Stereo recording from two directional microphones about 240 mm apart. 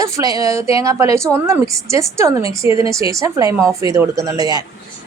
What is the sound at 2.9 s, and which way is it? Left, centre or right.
A woman's voice, centre.